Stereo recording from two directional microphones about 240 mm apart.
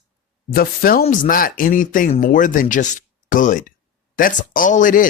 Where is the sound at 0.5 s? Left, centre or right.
Left.